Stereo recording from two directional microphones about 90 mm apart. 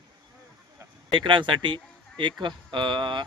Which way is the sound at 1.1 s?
65° right (ahead or behind).